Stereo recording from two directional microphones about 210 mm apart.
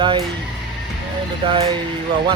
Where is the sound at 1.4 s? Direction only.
25° right (ahead or behind).